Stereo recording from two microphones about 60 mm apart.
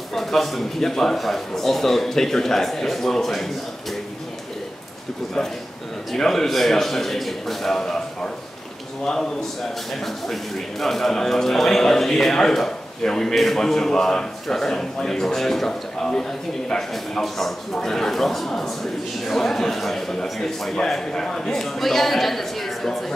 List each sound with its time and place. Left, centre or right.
0.1 s a man's voice: centre
6.1 s a man's voice: centre